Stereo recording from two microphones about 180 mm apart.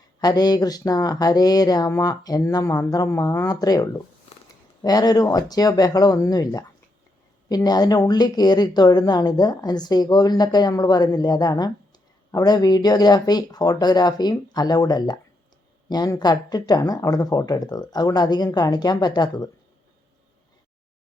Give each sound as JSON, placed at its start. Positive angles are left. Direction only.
{"t": 0.2, "sound": "speech", "side_deg": 20}